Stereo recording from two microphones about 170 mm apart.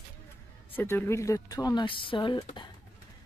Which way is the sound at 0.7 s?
10° left (ahead or behind).